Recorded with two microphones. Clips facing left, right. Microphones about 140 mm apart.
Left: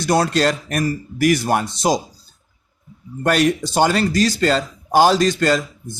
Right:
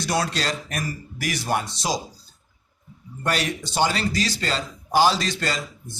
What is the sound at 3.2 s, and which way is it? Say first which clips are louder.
A man's voice: left 9 dB; 50° left (ahead or behind).